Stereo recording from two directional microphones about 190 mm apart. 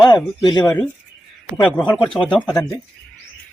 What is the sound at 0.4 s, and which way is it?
Speech, 20° left (ahead or behind).